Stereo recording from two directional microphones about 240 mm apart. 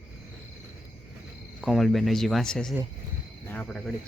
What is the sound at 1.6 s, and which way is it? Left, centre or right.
Speech, centre.